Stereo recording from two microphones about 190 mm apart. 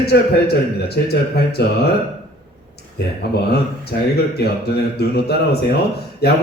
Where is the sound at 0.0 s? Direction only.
60° left (ahead or behind).